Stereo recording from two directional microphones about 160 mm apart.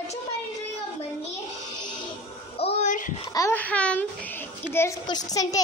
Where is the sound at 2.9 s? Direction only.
55° left (ahead or behind).